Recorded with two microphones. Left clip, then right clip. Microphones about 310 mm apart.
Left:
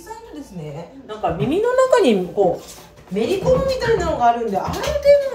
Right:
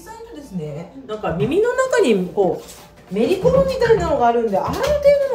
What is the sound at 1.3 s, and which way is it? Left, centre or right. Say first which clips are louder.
Speech: even; centre.